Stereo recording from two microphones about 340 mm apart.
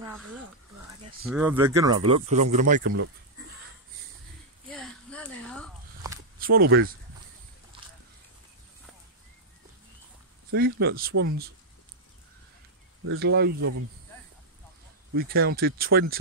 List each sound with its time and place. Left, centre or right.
1.2 s speech: centre
2.0 s speech: centre
4.6 s a sound: centre
6.0 s a sound: centre
6.4 s speech: right
10.5 s speech: right
13.0 s speech: right
15.1 s speech: right